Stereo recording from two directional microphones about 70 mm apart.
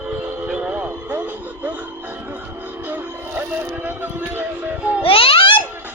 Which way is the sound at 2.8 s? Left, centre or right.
Right.